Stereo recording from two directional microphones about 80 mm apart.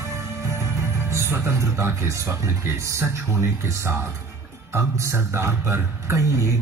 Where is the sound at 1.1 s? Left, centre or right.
Right.